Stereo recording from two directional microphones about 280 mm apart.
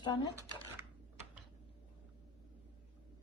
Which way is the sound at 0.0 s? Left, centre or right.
Centre.